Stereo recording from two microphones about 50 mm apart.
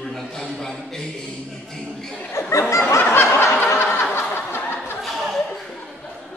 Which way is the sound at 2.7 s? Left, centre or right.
Left.